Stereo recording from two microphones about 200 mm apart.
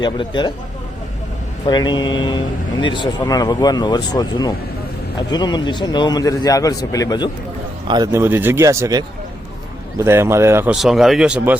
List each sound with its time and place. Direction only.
0.0 s speech: 20° left (ahead or behind)
1.6 s speech: 20° left (ahead or behind)
7.9 s speech: 20° right (ahead or behind)